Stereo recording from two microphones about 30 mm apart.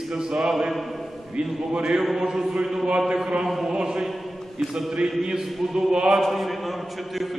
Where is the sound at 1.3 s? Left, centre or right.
Right.